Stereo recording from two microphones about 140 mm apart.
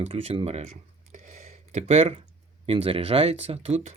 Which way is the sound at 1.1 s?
55° right (ahead or behind).